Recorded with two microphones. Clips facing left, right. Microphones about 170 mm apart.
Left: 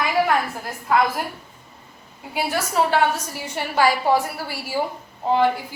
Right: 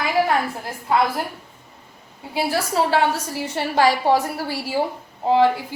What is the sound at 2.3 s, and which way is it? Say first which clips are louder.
A woman's voice: right 1 dB; 30° right (ahead or behind).